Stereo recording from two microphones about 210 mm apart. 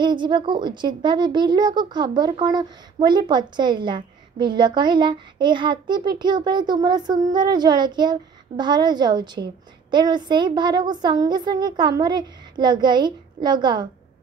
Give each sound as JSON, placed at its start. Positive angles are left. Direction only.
{"t": 0.0, "sound": "speech", "side_deg": -20}